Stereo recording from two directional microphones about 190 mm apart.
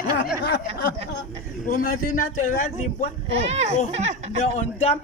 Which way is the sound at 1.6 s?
45° left (ahead or behind).